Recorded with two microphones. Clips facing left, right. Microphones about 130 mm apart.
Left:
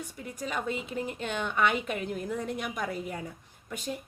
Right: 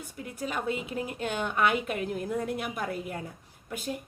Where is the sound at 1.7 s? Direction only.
45° right (ahead or behind).